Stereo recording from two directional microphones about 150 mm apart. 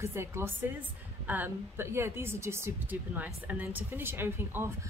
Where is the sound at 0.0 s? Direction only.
15° right (ahead or behind).